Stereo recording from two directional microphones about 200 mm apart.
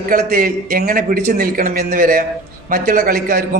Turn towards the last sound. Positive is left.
turn(degrees=-45)  # may be behind; listen again after turning